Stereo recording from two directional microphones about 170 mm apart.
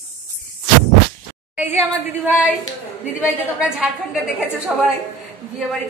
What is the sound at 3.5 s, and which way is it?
A woman's voice, 5° right (ahead or behind).